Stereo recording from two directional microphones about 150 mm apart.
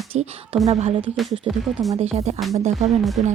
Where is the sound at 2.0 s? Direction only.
45° right (ahead or behind).